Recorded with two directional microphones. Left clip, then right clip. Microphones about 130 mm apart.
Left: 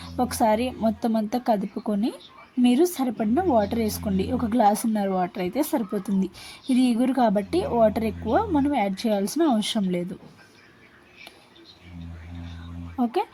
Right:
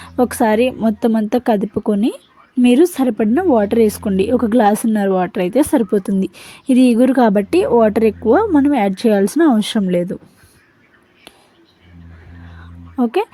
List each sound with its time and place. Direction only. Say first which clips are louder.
0.0 s a woman's voice: right 7 dB; 40° right (ahead or behind)
13.0 s a woman's voice: right 8 dB; 40° right (ahead or behind)